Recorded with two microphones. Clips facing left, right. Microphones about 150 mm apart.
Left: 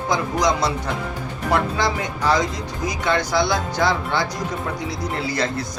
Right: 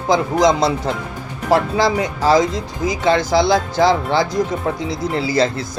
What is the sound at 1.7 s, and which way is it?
Speech, 90° right.